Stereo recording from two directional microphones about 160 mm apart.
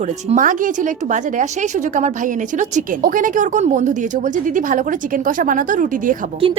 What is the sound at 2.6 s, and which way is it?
A woman's voice, 55° right (ahead or behind).